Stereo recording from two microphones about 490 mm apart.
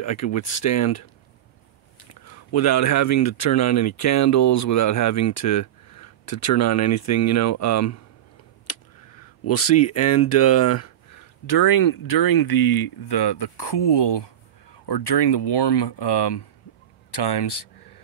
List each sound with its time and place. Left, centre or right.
0.0 s speech: left
9.4 s speech: left